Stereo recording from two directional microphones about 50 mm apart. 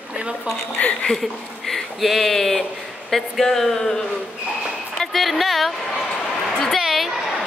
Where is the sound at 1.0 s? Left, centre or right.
Centre.